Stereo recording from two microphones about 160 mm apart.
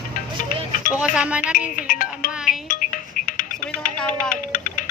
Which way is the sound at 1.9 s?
60° left (ahead or behind).